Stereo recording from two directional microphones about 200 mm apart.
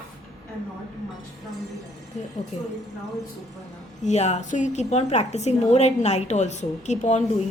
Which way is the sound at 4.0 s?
35° left (ahead or behind).